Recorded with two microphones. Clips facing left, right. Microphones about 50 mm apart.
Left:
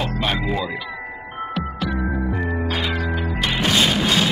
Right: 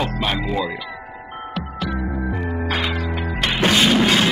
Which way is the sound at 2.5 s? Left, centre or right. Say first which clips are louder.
Right 1 dB; right.